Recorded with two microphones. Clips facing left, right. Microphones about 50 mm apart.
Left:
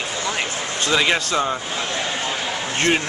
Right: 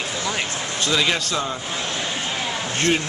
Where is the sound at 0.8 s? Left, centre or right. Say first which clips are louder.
Left 2 dB; left.